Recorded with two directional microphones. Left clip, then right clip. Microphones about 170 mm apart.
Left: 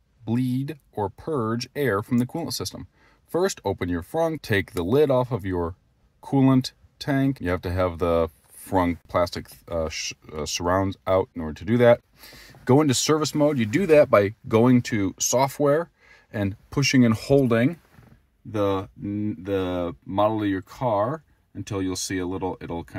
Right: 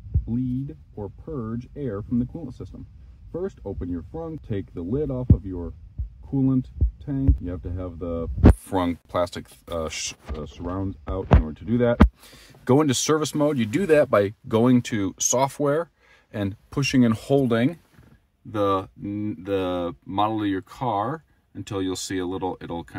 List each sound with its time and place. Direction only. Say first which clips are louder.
0.3 s speech: left 3 dB; 20° left (ahead or behind)
7.1 s speech: left 6 dB; 20° left (ahead or behind)
8.6 s speech: left 2 dB; 10° left (ahead or behind)
10.6 s speech: left 9 dB; 25° left (ahead or behind)
12.2 s speech: left 2 dB; centre (ahead or behind)